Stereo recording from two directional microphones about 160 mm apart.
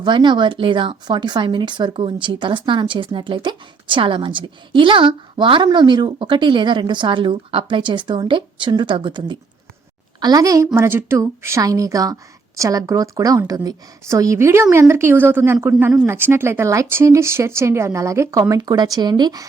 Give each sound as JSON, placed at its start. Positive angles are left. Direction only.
{"t": 0.0, "sound": "a woman's voice", "side_deg": -30}